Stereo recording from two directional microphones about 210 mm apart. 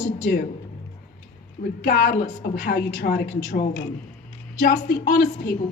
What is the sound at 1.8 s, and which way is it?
Speech, 50° left (ahead or behind).